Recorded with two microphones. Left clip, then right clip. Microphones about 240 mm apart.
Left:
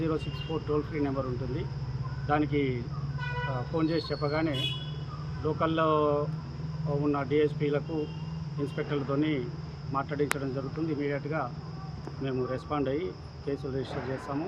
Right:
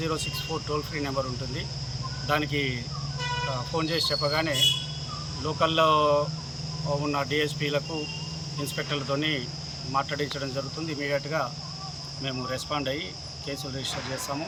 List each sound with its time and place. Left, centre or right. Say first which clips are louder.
0.0 s speech: right 2 dB; centre
3.8 s speech: right 3 dB; centre